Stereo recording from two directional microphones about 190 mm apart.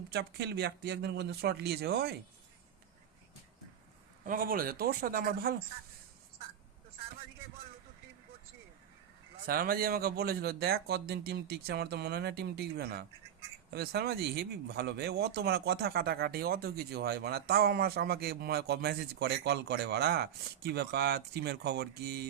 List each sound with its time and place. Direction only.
0.1 s speech: 60° right (ahead or behind)
4.2 s speech: 45° right (ahead or behind)
9.5 s speech: 50° right (ahead or behind)